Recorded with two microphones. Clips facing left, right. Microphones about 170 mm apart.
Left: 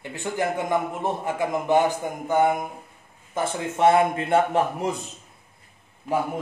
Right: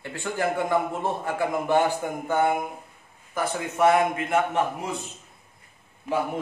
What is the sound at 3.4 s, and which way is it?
Speech, 25° left (ahead or behind).